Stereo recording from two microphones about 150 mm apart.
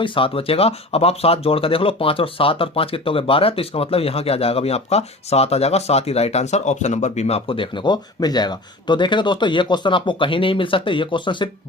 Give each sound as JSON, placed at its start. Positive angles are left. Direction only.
{"t": 0.0, "sound": "speech", "side_deg": 35}